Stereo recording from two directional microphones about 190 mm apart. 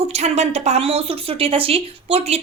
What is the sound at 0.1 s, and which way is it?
A woman's voice, 35° right (ahead or behind).